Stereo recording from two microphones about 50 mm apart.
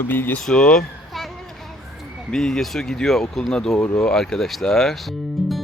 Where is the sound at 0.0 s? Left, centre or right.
Left.